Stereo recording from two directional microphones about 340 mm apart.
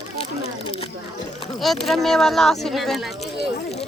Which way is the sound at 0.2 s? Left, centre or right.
Centre.